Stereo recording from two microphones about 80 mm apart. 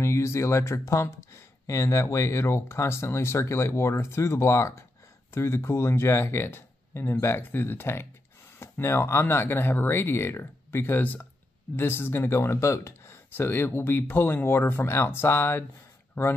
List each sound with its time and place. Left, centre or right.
0.0 s speech: left